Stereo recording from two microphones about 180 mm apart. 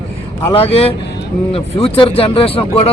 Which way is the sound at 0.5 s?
30° left (ahead or behind).